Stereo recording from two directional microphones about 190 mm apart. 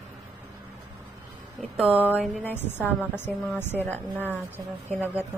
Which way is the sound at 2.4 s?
10° left (ahead or behind).